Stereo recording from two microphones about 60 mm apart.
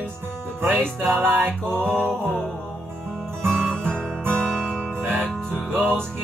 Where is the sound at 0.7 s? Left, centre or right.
Right.